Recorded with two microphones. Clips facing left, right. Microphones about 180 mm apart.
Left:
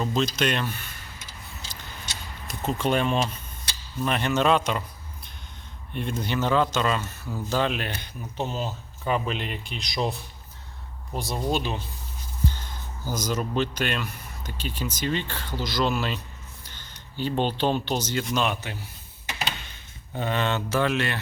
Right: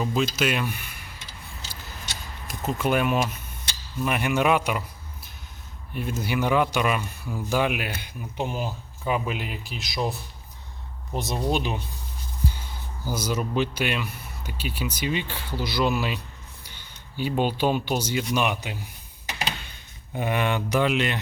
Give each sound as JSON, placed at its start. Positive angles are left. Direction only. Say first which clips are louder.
{"t": 0.0, "sound": "speech", "louder": "even", "side_deg": -5}
{"t": 2.5, "sound": "speech", "louder": "even", "side_deg": -5}
{"t": 5.9, "sound": "speech", "louder": "right 1 dB", "side_deg": -5}
{"t": 11.1, "sound": "speech", "louder": "right 1 dB", "side_deg": -20}
{"t": 20.1, "sound": "speech", "louder": "right 1 dB", "side_deg": -15}